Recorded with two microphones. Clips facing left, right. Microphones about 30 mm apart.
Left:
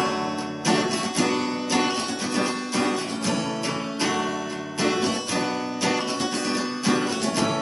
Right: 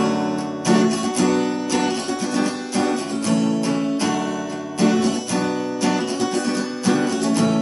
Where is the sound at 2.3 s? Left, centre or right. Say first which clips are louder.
Right 2 dB; centre.